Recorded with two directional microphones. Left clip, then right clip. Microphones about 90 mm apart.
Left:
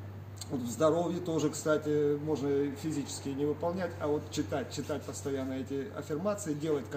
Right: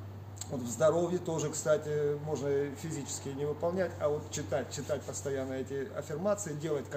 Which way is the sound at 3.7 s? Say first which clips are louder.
Right 1 dB; 40° right (ahead or behind).